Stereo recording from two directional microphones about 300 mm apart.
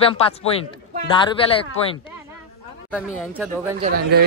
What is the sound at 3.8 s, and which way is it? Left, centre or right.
Speech, right.